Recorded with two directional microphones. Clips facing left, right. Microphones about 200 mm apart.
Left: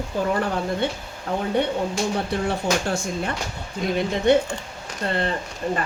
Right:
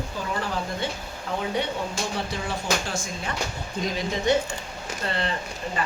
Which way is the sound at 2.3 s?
60° left (ahead or behind).